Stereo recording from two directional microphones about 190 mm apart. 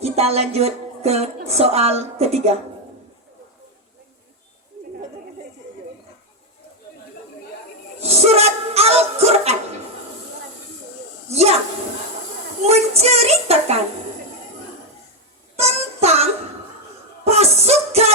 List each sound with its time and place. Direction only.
0.0 s speech: 35° right (ahead or behind)
8.0 s speech: 35° right (ahead or behind)
11.3 s a child's voice: 35° right (ahead or behind)
12.6 s a child's voice: 35° right (ahead or behind)
15.5 s music: 35° right (ahead or behind)